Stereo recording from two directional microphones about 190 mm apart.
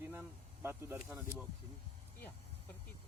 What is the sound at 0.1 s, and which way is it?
Speech, 10° right (ahead or behind).